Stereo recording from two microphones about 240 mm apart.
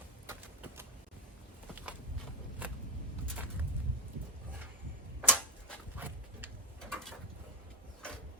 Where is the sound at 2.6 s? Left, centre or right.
Centre.